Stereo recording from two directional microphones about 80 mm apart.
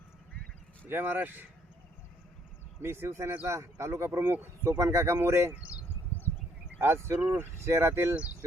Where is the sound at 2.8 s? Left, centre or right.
Right.